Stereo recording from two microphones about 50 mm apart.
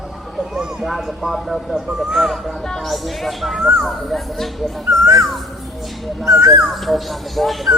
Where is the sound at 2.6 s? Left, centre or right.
Centre.